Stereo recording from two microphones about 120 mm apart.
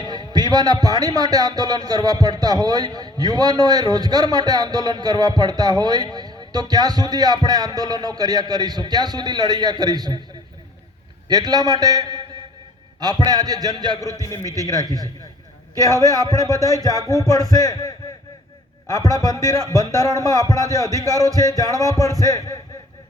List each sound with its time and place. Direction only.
0.0 s speech: 35° right (ahead or behind)
11.3 s speech: 35° right (ahead or behind)
14.0 s a man's voice: 25° left (ahead or behind)
14.4 s a man's voice: 30° right (ahead or behind)
17.5 s speech: 30° left (ahead or behind)
20.8 s speech: 25° right (ahead or behind)